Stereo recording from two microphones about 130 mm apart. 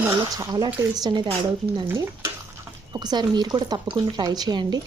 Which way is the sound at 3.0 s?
35° right (ahead or behind).